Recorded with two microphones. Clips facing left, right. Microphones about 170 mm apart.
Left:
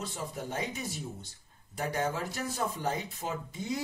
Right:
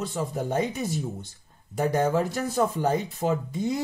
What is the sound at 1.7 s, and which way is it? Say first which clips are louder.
Speech: right 9 dB; 55° right (ahead or behind).